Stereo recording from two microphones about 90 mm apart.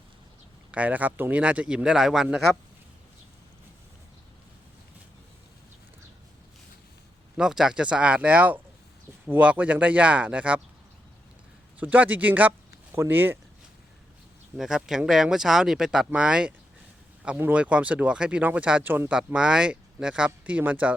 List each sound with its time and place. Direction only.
0.7 s speech: 15° right (ahead or behind)
7.3 s speech: 5° right (ahead or behind)
11.8 s speech: 15° right (ahead or behind)
14.6 s speech: 5° right (ahead or behind)